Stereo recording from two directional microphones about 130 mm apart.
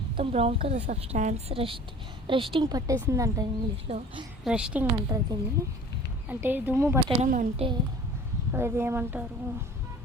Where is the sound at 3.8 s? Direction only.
50° right (ahead or behind).